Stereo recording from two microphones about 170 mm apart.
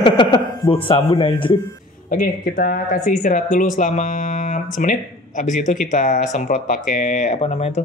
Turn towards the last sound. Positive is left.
turn(degrees=40)  # may be behind; listen again after turning